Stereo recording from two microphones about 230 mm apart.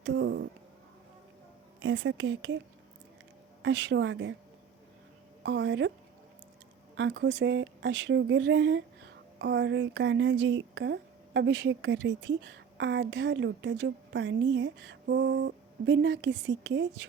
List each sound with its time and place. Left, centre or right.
0.0 s a sound: right
1.8 s speech: right
3.6 s speech: right
5.4 s a woman's voice: right
6.9 s speech: right